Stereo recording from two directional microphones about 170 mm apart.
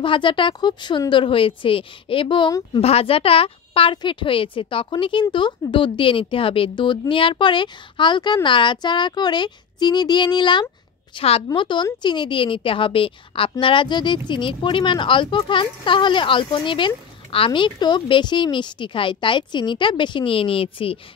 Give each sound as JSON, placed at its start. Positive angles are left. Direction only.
{"t": 0.0, "sound": "a woman's voice", "side_deg": 30}